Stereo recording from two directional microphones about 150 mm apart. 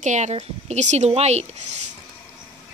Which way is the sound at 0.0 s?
50° right (ahead or behind).